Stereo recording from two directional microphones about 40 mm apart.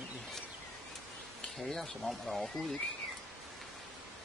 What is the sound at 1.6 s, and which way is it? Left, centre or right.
Speech, centre.